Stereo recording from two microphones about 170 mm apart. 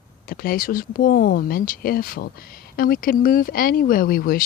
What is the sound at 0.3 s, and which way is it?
Speech, 60° left (ahead or behind).